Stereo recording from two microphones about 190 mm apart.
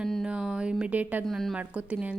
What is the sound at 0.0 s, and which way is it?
A woman's voice, centre (ahead or behind).